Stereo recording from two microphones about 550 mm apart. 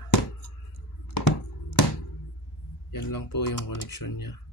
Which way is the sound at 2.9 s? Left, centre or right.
Left.